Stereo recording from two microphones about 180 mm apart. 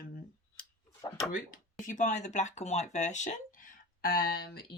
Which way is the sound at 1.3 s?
45° left (ahead or behind).